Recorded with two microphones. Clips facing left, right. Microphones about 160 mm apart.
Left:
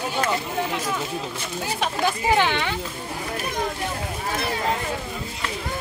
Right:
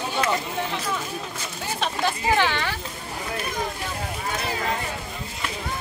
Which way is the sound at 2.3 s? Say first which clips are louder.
Left 2 dB; 20° left (ahead or behind).